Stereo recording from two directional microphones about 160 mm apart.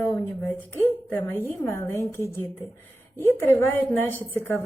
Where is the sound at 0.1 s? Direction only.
15° left (ahead or behind).